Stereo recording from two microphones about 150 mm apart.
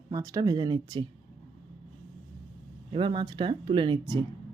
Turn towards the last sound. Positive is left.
turn(degrees=-30)  # may be behind; listen again after turning